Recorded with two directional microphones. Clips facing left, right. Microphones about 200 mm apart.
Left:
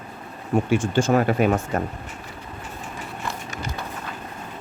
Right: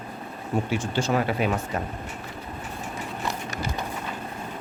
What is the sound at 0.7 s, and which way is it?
Speech, 50° left (ahead or behind).